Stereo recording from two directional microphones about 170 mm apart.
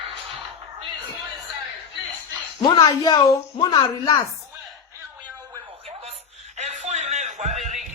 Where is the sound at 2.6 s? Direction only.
25° left (ahead or behind).